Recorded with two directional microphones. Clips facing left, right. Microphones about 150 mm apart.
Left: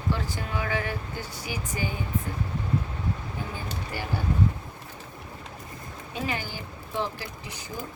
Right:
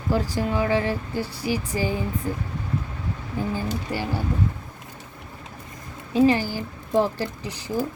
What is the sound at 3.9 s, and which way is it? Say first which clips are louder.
Speech: right 6 dB; 30° right (ahead or behind).